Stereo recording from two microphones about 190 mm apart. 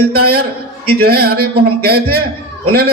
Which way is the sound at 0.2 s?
55° right (ahead or behind).